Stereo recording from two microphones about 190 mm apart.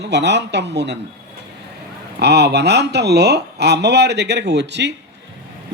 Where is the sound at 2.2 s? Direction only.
60° right (ahead or behind).